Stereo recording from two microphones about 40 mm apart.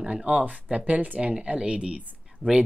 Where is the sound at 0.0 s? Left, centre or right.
Right.